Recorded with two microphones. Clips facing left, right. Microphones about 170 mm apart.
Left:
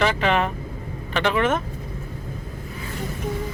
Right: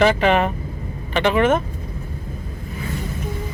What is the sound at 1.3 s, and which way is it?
Speech, 15° right (ahead or behind).